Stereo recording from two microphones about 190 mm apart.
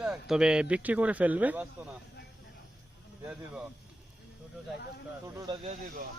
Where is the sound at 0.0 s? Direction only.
5° right (ahead or behind).